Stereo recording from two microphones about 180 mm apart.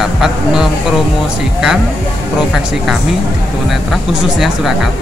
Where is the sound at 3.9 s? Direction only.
Centre (ahead or behind).